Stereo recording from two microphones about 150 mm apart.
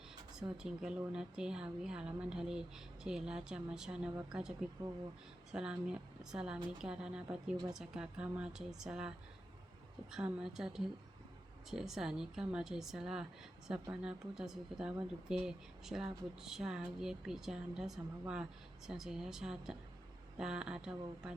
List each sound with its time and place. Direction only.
0.3 s a woman's voice: 5° right (ahead or behind)
10.2 s speech: 5° right (ahead or behind)